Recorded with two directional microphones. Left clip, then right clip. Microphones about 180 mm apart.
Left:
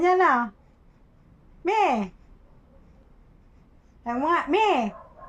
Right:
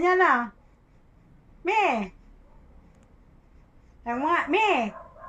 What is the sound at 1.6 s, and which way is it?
Speech, 25° left (ahead or behind).